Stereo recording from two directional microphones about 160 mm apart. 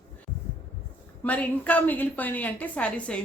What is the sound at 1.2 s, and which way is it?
A woman's voice, 10° left (ahead or behind).